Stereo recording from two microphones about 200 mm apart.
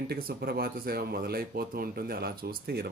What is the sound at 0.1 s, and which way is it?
Speech, 50° right (ahead or behind).